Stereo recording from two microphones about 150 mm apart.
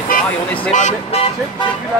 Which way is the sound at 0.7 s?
50° left (ahead or behind).